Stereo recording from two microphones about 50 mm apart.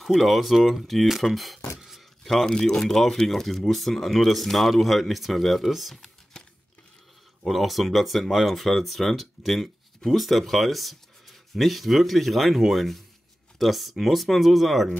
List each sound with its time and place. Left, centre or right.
0.0 s speech: centre
7.4 s speech: centre